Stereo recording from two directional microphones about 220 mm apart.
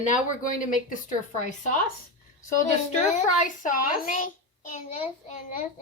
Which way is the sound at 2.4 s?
30° left (ahead or behind).